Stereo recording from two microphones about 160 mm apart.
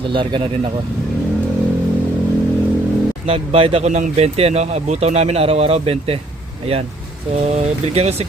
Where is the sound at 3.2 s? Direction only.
35° right (ahead or behind).